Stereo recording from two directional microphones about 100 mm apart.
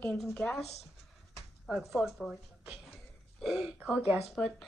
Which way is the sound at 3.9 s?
20° right (ahead or behind).